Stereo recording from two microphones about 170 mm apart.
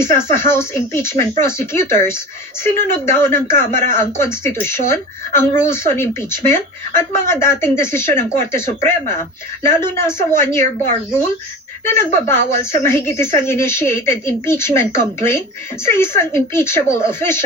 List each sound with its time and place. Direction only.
0.0 s speech: 15° left (ahead or behind)
12.1 s speech: 15° left (ahead or behind)